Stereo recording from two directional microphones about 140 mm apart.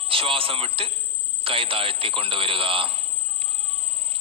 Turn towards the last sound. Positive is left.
turn(degrees=-40)  # may be behind; listen again after turning